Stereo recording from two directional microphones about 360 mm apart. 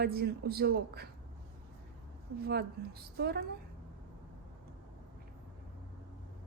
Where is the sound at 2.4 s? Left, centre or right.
Right.